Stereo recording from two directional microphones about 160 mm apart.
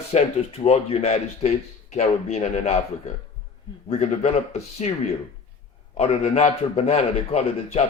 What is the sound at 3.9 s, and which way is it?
A man's voice, 45° left (ahead or behind).